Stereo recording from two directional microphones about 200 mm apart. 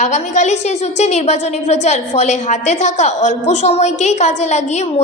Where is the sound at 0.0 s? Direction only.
35° left (ahead or behind).